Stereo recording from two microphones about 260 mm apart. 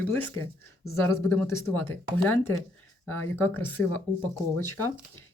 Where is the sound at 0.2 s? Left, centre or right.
Centre.